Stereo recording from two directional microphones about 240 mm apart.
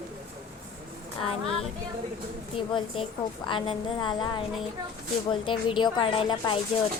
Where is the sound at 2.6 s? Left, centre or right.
Left.